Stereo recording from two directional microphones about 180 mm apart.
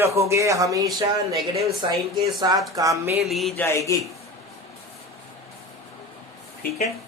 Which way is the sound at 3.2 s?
Centre (ahead or behind).